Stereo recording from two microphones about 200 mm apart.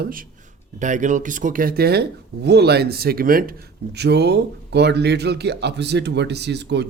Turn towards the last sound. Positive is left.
turn(degrees=-60)  # may be behind; listen again after turning